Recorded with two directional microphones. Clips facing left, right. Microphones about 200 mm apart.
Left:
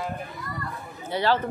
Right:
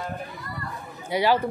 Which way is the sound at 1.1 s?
10° right (ahead or behind).